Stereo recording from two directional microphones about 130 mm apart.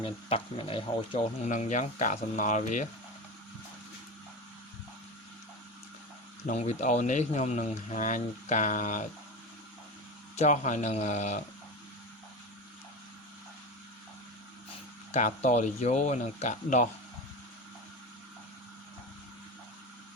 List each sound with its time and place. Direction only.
0.0 s speech: 45° left (ahead or behind)
1.5 s speech: 75° left (ahead or behind)
6.5 s speech: 55° left (ahead or behind); by 9.0 s 85° left
10.3 s speech: 65° left (ahead or behind)
15.1 s speech: 65° left (ahead or behind)